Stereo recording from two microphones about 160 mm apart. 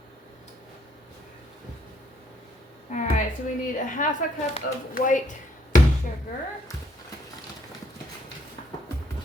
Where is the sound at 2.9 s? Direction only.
50° left (ahead or behind).